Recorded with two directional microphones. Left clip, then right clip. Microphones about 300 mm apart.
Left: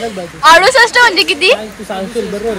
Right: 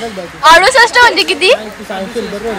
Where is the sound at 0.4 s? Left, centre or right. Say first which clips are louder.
Right 1 dB; centre.